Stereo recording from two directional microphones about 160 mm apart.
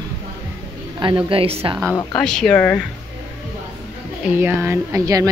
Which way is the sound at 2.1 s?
5° left (ahead or behind).